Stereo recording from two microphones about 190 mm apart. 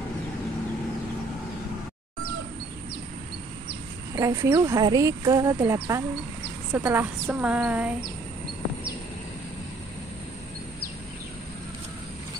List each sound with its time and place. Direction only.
4.1 s speech: 15° right (ahead or behind)